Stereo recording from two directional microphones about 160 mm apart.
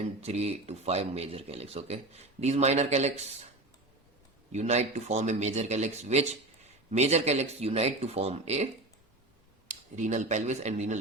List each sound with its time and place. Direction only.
0.0 s speech: 40° right (ahead or behind)
4.5 s speech: 45° right (ahead or behind)